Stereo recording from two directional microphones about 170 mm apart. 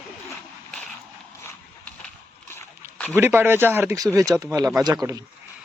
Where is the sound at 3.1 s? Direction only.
10° right (ahead or behind).